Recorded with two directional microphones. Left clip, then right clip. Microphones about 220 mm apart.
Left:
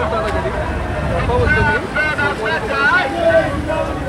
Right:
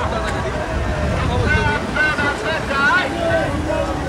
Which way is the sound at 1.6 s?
Centre (ahead or behind).